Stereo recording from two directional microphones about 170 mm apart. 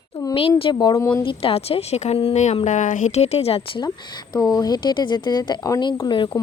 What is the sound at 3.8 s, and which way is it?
Speech, 20° left (ahead or behind).